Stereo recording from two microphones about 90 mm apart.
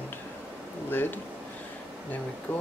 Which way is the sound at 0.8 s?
20° left (ahead or behind).